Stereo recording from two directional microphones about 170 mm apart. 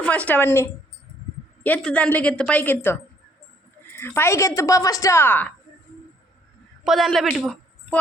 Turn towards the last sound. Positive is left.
turn(degrees=0)  # may be behind; listen again after turning